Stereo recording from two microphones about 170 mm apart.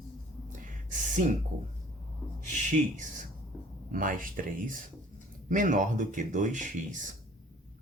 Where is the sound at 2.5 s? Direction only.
50° right (ahead or behind).